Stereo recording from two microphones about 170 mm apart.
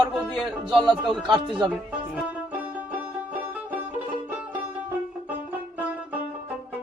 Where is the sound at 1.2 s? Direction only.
30° right (ahead or behind).